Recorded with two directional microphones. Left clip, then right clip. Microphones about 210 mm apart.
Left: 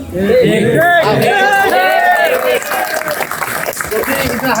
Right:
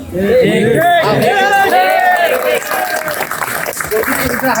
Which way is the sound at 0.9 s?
Centre (ahead or behind).